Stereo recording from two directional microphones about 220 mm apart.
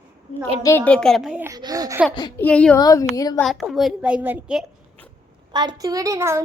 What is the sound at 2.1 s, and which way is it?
Speech, 20° left (ahead or behind).